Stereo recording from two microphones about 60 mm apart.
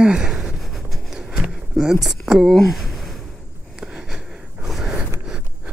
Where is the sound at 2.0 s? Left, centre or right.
Centre.